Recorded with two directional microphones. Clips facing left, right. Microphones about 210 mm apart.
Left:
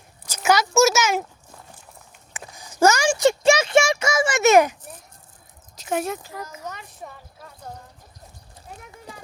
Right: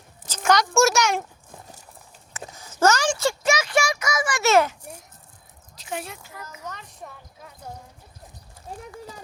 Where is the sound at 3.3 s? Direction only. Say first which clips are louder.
Left 9 dB; 25° left (ahead or behind).